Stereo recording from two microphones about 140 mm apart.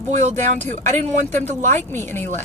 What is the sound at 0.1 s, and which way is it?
Speech, 55° right (ahead or behind).